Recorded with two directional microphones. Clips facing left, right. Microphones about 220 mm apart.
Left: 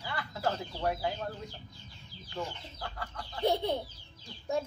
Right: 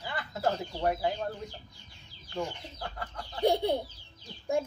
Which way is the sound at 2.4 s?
15° right (ahead or behind).